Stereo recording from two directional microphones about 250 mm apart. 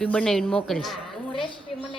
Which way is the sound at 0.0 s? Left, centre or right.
Centre.